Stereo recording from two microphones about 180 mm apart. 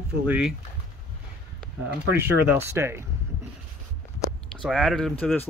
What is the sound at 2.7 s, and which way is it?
Speech, 15° right (ahead or behind).